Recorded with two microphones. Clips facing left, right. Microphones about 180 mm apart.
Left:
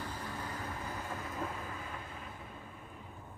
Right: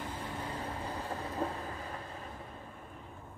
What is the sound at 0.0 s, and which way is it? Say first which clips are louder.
Vehicle: right 2 dB; 25° right (ahead or behind).